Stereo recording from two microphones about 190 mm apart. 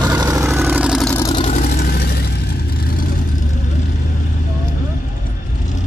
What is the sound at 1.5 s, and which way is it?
Vehicle, 50° left (ahead or behind).